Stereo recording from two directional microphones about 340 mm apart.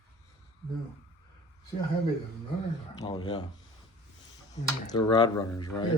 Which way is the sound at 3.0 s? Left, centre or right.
Centre.